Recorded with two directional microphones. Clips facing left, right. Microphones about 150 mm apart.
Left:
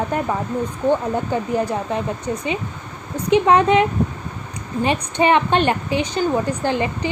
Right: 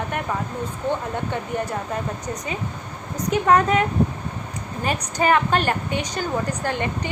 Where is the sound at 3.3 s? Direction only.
25° left (ahead or behind).